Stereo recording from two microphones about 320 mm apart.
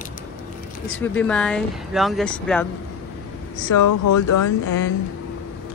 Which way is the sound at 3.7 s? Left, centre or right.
Left.